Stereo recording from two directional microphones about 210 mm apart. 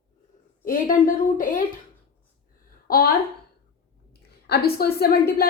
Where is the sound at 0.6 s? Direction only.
40° left (ahead or behind).